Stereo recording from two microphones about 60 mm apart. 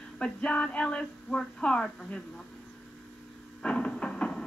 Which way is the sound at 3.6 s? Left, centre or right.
Centre.